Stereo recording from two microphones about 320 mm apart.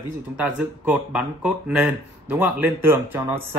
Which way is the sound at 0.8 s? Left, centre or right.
Centre.